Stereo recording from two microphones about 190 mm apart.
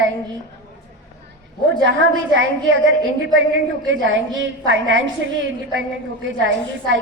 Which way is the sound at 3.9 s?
85° right.